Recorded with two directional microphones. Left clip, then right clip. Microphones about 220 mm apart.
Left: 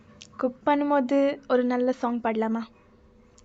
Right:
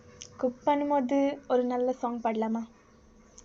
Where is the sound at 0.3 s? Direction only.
25° left (ahead or behind).